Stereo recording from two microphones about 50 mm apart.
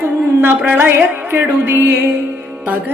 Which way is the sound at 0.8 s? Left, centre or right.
Right.